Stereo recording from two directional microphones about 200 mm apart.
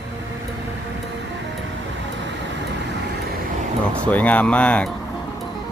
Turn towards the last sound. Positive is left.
turn(degrees=5)  # may be behind; listen again after turning